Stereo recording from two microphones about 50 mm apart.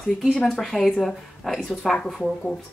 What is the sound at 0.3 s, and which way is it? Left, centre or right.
Speech, centre.